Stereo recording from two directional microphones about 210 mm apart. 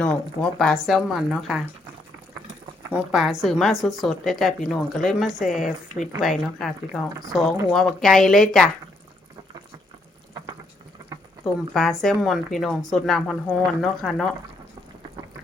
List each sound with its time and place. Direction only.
0.0 s a woman's voice: 5° left (ahead or behind)
2.9 s a woman's voice: centre (ahead or behind)
7.1 s speech: 15° right (ahead or behind)
7.7 s a woman's voice: centre (ahead or behind)
11.7 s a woman's voice: centre (ahead or behind)